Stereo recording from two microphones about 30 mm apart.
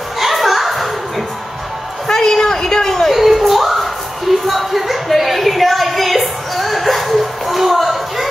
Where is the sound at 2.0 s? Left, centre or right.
Centre.